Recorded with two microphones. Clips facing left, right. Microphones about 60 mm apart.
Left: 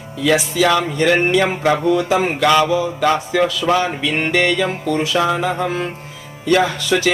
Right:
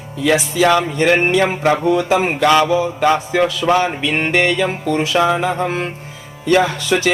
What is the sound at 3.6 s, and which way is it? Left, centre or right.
Music, centre.